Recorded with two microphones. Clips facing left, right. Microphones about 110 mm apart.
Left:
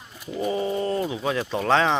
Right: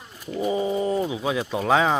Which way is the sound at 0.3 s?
10° right (ahead or behind).